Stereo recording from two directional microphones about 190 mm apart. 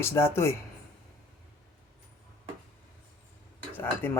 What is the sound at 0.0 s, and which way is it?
Speech, 15° left (ahead or behind).